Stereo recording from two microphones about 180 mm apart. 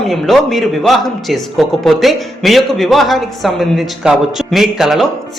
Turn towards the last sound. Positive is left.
turn(degrees=0)  # may be behind; listen again after turning